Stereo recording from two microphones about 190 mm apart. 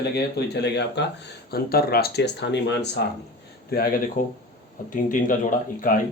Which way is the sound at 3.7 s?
50° left (ahead or behind).